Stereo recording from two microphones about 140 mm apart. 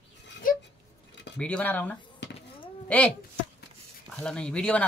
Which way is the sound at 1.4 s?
10° left (ahead or behind).